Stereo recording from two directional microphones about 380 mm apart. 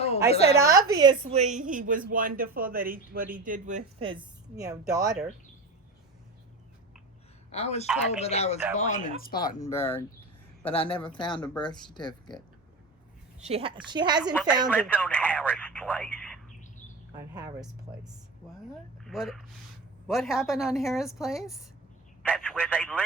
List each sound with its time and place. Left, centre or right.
0.6 s a woman's voice: centre
7.5 s speech: centre
9.6 s speech: centre
13.4 s speech: centre
14.7 s speech: centre
17.3 s speech: centre